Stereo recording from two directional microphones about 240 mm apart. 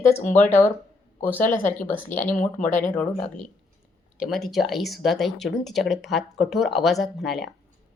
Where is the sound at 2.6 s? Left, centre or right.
Left.